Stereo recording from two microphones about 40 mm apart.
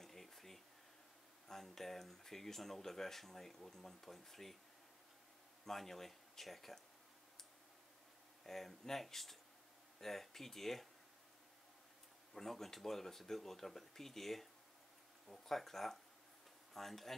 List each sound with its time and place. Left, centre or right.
0.0 s a sound: centre
1.5 s speech: centre
5.7 s speech: centre
8.5 s speech: centre
12.4 s speech: centre